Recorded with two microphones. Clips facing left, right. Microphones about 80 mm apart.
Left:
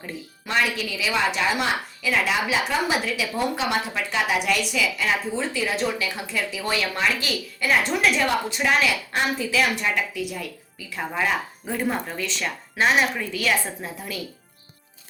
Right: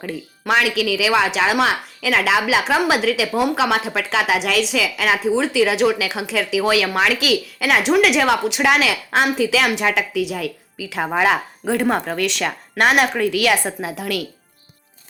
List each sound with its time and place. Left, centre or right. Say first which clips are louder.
0.0 s a woman's voice: right 8 dB; right
12.5 s a woman's voice: right 3 dB; right